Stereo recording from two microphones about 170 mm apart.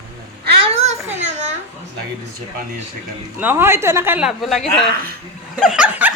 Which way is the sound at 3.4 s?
10° right (ahead or behind).